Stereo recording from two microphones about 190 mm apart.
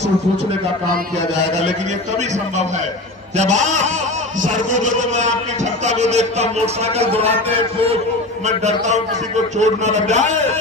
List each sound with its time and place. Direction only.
3.3 s a man's voice: 40° right (ahead or behind)
8.4 s a man's voice: 35° right (ahead or behind)